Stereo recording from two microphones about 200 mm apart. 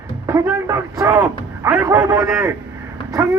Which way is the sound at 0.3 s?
15° right (ahead or behind).